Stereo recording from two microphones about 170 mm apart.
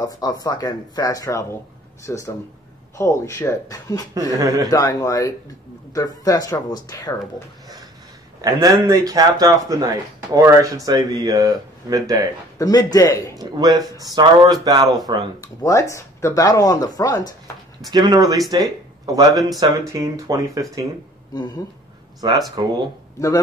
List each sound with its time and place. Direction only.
0.0 s speech: 20° left (ahead or behind)
4.1 s speech: 20° right (ahead or behind)
4.6 s speech: 20° left (ahead or behind)
8.4 s speech: 20° right (ahead or behind)
12.5 s speech: 20° left (ahead or behind)
13.4 s speech: 20° right (ahead or behind)
15.4 s speech: 20° left (ahead or behind)
17.9 s speech: 25° right (ahead or behind)
22.2 s speech: 25° right (ahead or behind)
23.1 s speech: 20° left (ahead or behind)